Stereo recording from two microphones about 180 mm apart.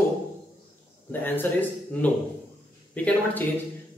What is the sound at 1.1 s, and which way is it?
Speech, 10° left (ahead or behind).